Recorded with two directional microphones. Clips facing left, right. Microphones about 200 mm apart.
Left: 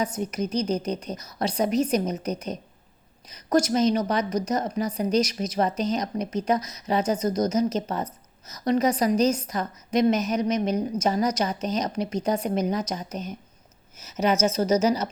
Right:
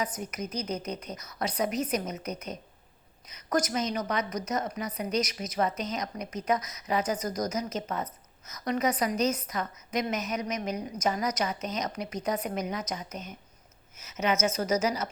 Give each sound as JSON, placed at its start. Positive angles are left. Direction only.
{"t": 0.2, "sound": "a woman's voice", "side_deg": 30}